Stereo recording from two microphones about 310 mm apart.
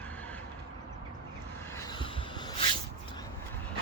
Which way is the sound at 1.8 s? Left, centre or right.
Centre.